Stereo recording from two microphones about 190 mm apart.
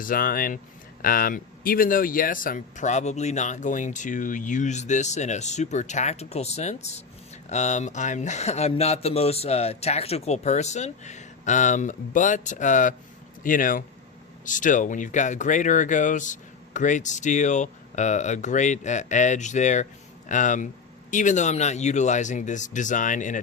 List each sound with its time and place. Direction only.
0.0 s speech: 50° left (ahead or behind)